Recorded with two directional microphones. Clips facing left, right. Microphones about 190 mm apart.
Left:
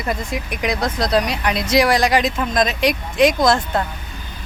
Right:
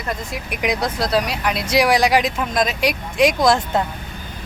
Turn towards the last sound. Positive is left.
turn(degrees=-10)  # may be behind; listen again after turning